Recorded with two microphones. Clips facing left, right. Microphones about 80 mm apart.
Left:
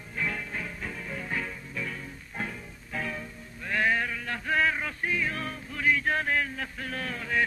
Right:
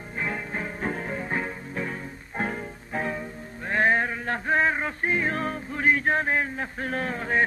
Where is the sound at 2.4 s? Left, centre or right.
Right.